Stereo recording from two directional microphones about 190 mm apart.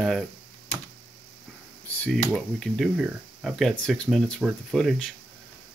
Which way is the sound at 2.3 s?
Centre (ahead or behind).